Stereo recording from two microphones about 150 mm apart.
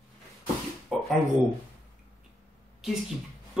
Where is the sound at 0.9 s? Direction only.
Centre (ahead or behind).